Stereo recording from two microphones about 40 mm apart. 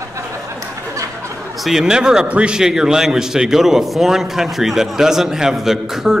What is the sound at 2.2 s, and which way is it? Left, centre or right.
Speech, right.